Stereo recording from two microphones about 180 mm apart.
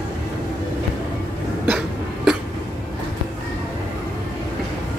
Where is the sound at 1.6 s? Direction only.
5° right (ahead or behind).